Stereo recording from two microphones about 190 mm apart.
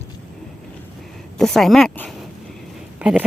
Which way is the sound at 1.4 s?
Centre (ahead or behind).